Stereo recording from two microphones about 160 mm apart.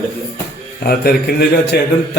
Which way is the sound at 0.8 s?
70° left (ahead or behind).